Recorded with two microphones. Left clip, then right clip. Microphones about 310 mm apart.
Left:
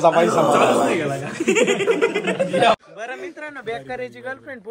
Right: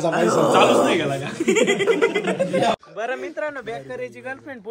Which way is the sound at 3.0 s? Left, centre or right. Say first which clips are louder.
Right 5 dB; right.